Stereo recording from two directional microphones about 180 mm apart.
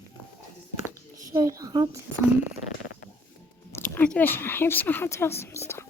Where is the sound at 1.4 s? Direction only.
20° right (ahead or behind).